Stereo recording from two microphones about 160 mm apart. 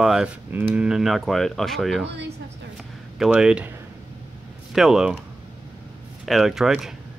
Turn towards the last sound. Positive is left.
turn(degrees=0)  # may be behind; listen again after turning